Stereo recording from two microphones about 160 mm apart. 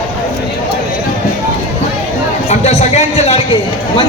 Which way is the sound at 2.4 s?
45° left (ahead or behind).